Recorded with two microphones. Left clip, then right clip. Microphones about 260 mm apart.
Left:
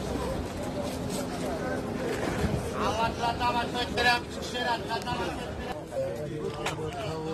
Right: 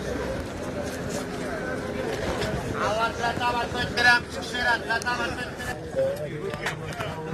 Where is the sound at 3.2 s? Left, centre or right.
Right.